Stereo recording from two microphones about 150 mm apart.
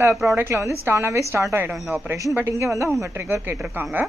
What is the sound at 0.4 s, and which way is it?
A woman's voice, 15° right (ahead or behind).